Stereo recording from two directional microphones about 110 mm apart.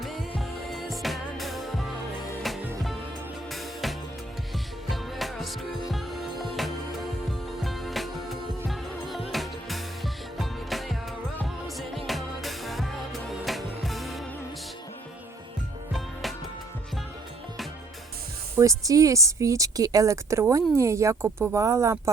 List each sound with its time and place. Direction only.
0.0 s music: centre (ahead or behind)
3.5 s music: centre (ahead or behind)
15.9 s music: centre (ahead or behind)
18.5 s speech: 30° right (ahead or behind)